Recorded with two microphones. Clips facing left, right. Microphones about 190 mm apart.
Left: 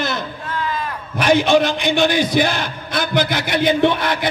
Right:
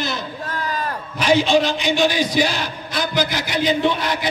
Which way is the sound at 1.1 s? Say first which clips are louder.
Left 2 dB; 55° left (ahead or behind).